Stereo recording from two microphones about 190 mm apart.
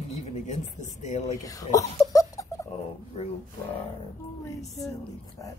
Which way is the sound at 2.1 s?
15° left (ahead or behind).